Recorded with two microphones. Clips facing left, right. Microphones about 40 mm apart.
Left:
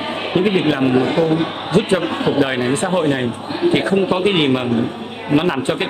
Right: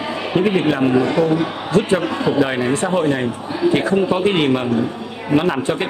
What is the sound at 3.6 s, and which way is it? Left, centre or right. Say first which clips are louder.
Speech: even; left.